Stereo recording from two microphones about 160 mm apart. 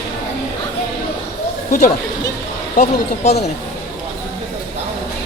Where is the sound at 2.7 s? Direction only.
45° left (ahead or behind).